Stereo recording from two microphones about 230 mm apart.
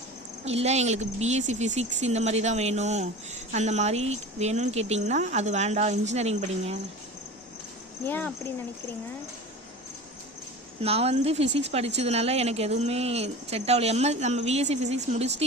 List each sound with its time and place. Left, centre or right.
0.4 s speech: right
8.0 s speech: centre
10.8 s speech: right